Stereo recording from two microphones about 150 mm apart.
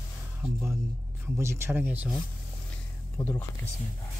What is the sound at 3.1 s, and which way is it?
Speech, 15° left (ahead or behind).